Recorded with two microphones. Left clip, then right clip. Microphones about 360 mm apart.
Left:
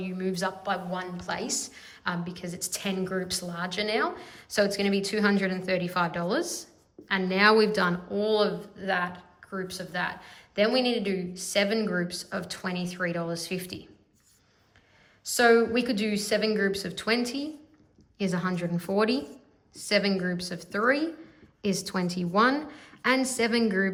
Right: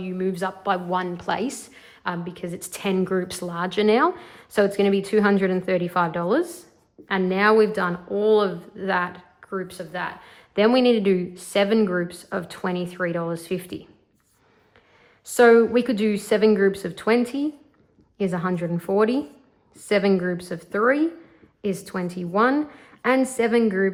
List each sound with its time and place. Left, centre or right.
0.0 s speech: centre
15.3 s a woman's voice: centre